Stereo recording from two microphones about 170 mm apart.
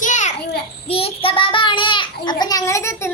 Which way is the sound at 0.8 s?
35° left (ahead or behind).